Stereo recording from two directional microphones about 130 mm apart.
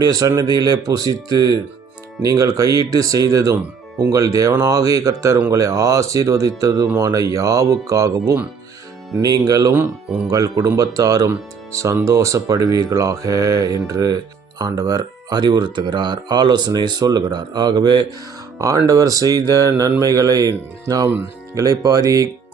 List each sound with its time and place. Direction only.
0.0 s speech: 30° right (ahead or behind)